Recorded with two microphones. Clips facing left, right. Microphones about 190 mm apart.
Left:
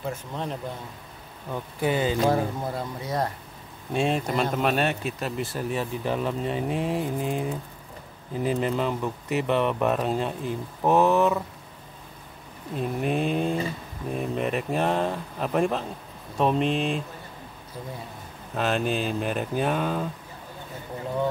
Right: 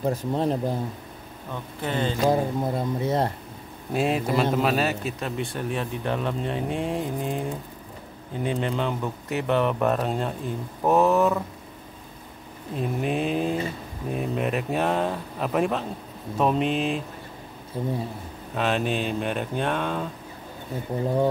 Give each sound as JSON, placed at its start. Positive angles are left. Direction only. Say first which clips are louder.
{"t": 0.0, "sound": "speech", "louder": "right 7 dB", "side_deg": -35}
{"t": 1.5, "sound": "speech", "louder": "left 4 dB", "side_deg": 10}
{"t": 2.2, "sound": "speech", "louder": "right 2 dB", "side_deg": -20}
{"t": 3.9, "sound": "a man's voice", "louder": "right 1 dB", "side_deg": -5}
{"t": 12.7, "sound": "a man's voice", "louder": "even", "side_deg": 0}
{"t": 17.8, "sound": "speech", "louder": "right 9 dB", "side_deg": -30}
{"t": 18.5, "sound": "a man's voice", "louder": "even", "side_deg": 0}